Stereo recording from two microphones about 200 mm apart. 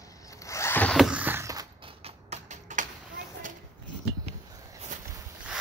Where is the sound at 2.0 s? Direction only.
35° right (ahead or behind).